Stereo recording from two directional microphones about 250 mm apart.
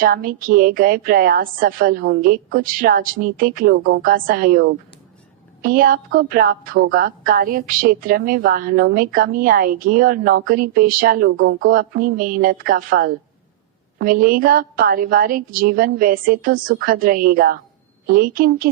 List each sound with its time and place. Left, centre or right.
0.0 s a woman's voice: right